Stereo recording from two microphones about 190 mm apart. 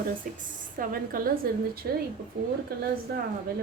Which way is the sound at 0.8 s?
45° right (ahead or behind).